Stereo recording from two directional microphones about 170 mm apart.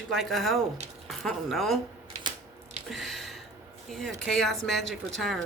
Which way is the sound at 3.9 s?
Centre (ahead or behind).